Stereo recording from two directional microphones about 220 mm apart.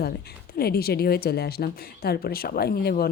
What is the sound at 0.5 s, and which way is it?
A woman's voice, 45° left (ahead or behind).